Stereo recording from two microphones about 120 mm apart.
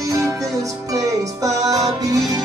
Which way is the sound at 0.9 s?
30° right (ahead or behind).